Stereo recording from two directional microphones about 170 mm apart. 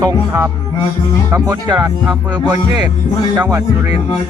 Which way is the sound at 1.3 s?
20° right (ahead or behind).